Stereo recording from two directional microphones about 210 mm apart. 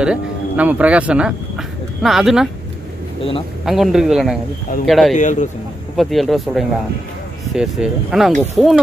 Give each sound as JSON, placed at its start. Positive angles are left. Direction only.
{"t": 0.0, "sound": "speech", "side_deg": -5}
{"t": 3.6, "sound": "speech", "side_deg": 0}
{"t": 5.1, "sound": "speech", "side_deg": 35}
{"t": 5.9, "sound": "speech", "side_deg": 0}